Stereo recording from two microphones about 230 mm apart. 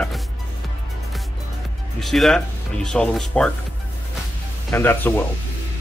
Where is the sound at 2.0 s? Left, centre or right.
Centre.